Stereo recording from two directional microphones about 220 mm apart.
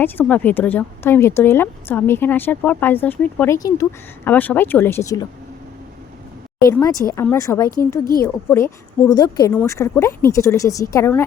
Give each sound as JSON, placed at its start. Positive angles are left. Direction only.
{"t": 0.0, "sound": "speech", "side_deg": 10}
{"t": 6.7, "sound": "speech", "side_deg": 15}